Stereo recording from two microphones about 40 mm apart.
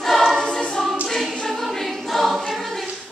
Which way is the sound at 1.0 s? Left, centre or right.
Centre.